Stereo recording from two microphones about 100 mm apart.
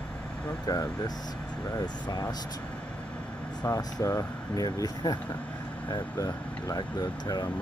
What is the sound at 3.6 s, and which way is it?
Speech, 30° left (ahead or behind).